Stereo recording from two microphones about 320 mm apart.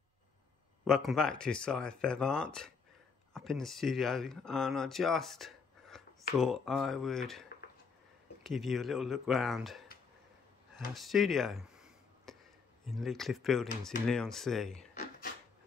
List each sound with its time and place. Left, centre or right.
0.8 s speech: centre
8.5 s speech: centre
11.0 s a sound: centre
12.8 s speech: centre